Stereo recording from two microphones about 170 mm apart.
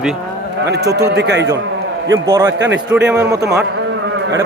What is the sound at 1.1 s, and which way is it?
Speech, 85° right.